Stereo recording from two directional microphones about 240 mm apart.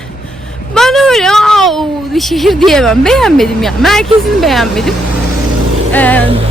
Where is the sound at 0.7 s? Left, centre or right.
Centre.